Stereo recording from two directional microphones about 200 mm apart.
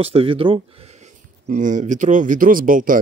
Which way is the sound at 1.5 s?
40° right (ahead or behind).